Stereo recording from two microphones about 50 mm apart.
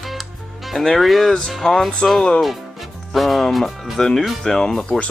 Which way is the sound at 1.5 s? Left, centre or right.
Centre.